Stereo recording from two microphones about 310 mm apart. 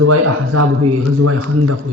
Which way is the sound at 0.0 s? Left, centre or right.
Right.